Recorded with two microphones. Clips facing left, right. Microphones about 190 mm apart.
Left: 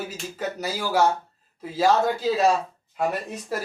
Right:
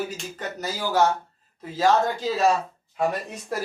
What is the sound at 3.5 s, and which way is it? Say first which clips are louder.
Speech: right 1 dB; 5° left (ahead or behind).